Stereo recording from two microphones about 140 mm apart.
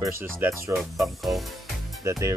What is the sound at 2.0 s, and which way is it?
Speech, 20° right (ahead or behind).